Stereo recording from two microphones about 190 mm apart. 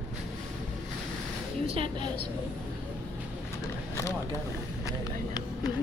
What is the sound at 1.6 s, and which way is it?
Speech, 30° right (ahead or behind).